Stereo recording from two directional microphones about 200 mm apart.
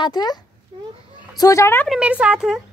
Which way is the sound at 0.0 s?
20° left (ahead or behind).